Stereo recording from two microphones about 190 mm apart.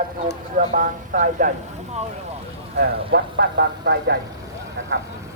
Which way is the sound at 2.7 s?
60° right (ahead or behind).